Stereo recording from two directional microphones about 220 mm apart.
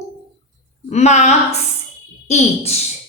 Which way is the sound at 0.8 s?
30° left (ahead or behind).